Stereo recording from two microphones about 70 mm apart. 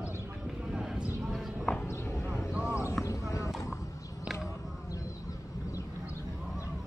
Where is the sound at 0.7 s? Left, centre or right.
Centre.